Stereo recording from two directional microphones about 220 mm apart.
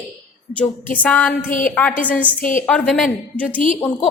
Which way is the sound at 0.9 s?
5° left (ahead or behind).